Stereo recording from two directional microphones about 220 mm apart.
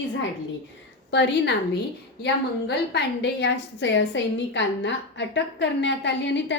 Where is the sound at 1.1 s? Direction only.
50° left (ahead or behind).